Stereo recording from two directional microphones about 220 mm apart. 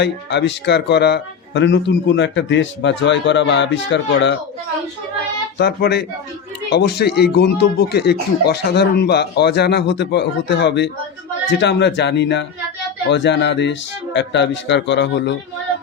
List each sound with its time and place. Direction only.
0.0 s a man's voice: 50° left (ahead or behind)
5.5 s speech: 45° left (ahead or behind)